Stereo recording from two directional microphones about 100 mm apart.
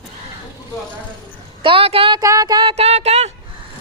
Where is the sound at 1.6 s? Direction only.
65° right (ahead or behind).